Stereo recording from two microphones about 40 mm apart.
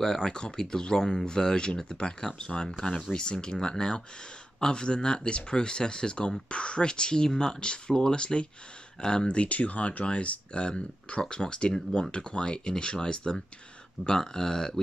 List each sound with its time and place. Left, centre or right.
0.0 s speech: centre
9.4 s speech: left; by 14.8 s centre